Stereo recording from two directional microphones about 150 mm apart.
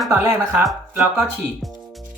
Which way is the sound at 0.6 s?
Centre (ahead or behind).